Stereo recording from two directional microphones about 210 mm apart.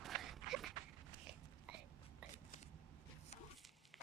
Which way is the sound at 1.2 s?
5° right (ahead or behind).